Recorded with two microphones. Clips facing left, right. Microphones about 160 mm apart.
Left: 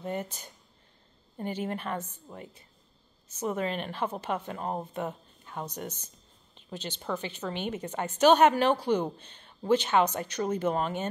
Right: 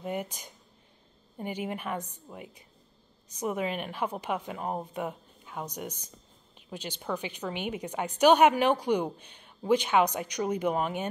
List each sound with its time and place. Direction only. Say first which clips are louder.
0.0 s a woman's voice: even; 10° right (ahead or behind)